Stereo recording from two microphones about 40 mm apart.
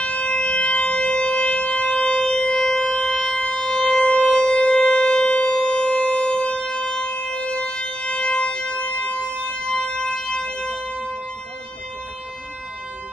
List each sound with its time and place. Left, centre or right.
0.0 s wind instrument: left
1.1 s shofar: left
2.1 s shofar: centre
2.5 s siren: centre
2.8 s siren: left
4.3 s shofar: left
4.7 s siren: left
5.6 s shofar: left
6.7 s siren: left